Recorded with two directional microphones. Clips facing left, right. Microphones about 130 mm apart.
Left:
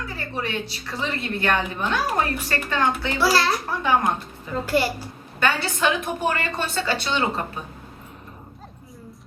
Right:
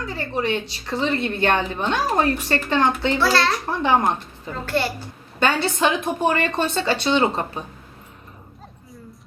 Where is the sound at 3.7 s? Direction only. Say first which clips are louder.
Right 3 dB; 25° right (ahead or behind).